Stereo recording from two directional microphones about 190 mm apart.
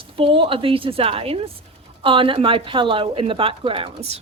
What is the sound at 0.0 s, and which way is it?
A woman's voice, 30° right (ahead or behind).